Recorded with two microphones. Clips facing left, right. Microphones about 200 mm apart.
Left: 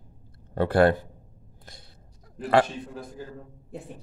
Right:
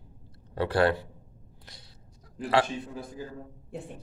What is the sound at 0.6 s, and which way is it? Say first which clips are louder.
Speech: left 4 dB; 50° left (ahead or behind).